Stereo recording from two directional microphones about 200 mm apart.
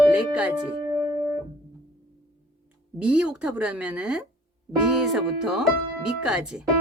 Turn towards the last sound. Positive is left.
turn(degrees=-5)  # may be behind; listen again after turning